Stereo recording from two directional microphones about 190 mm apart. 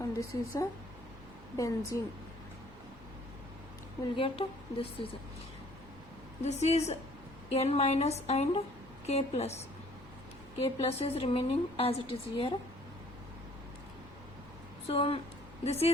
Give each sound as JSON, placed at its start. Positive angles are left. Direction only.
{"t": 0.0, "sound": "speech", "side_deg": 15}
{"t": 1.9, "sound": "speech", "side_deg": 15}
{"t": 4.1, "sound": "a woman's voice", "side_deg": 30}
{"t": 6.4, "sound": "a woman's voice", "side_deg": 35}
{"t": 10.6, "sound": "a woman's voice", "side_deg": 30}
{"t": 14.8, "sound": "a woman's voice", "side_deg": 30}